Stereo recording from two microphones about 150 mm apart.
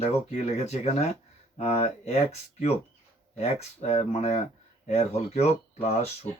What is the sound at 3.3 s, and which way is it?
Speech, 45° left (ahead or behind).